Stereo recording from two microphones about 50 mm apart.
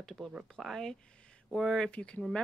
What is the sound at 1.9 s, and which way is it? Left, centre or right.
Speech, left.